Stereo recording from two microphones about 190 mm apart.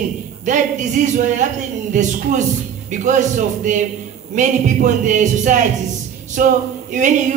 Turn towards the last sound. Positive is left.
turn(degrees=-40)  # may be behind; listen again after turning